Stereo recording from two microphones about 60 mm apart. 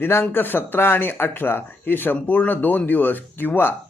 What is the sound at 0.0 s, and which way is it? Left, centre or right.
Speech, left.